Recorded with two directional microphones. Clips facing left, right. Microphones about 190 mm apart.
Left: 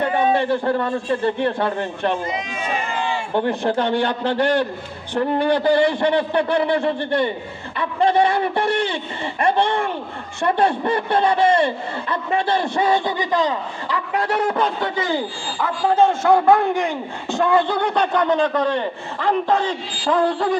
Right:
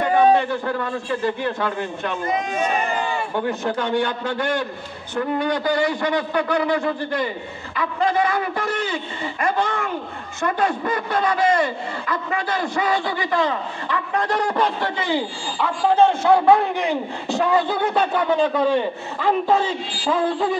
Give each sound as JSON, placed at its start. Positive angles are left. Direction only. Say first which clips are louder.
{"t": 1.2, "sound": "a man's voice", "louder": "left 2 dB", "side_deg": 30}
{"t": 2.2, "sound": "speech", "louder": "right 4 dB", "side_deg": -50}
{"t": 3.3, "sound": "a man's voice", "louder": "left 5 dB", "side_deg": 30}